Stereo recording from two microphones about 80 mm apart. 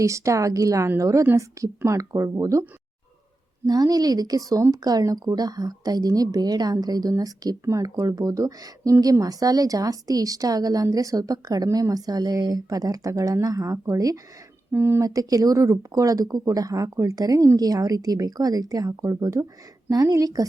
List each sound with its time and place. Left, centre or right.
0.0 s speech: right
3.7 s speech: right
14.7 s speech: right
15.0 s speech: right